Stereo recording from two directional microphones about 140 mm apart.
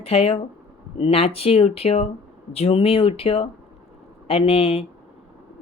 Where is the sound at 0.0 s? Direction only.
45° left (ahead or behind).